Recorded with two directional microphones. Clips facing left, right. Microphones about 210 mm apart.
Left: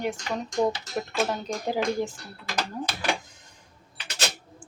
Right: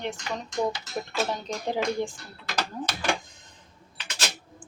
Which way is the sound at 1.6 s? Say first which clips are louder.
Left 1 dB; 5° left (ahead or behind).